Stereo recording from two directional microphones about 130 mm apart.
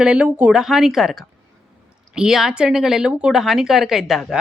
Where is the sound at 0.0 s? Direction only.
10° right (ahead or behind).